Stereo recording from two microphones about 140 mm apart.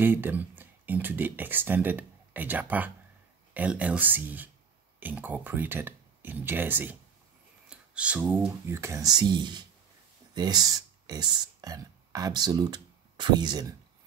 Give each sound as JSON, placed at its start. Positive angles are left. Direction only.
{"t": 0.0, "sound": "speech", "side_deg": -15}